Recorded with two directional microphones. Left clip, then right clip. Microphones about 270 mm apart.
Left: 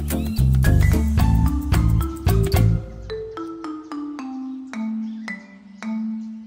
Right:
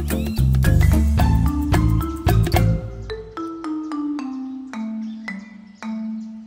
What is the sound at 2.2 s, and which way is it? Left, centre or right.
Music, centre.